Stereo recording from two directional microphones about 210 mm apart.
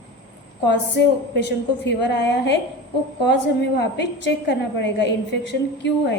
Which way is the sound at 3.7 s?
55° left (ahead or behind).